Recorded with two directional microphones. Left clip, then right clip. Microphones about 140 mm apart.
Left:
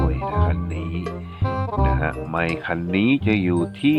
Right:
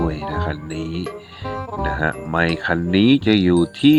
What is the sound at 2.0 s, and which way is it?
Speech, 40° right (ahead or behind).